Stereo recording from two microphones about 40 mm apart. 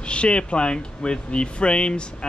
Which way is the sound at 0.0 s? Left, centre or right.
Left.